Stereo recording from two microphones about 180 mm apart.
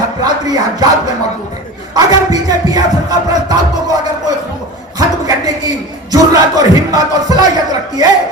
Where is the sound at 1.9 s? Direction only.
20° right (ahead or behind).